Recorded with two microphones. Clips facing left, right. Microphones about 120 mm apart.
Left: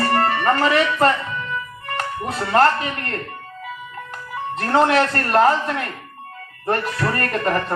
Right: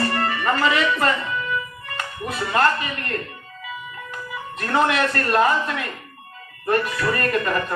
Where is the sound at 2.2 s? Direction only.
35° left (ahead or behind).